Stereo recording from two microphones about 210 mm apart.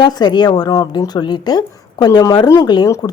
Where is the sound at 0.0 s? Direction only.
20° left (ahead or behind).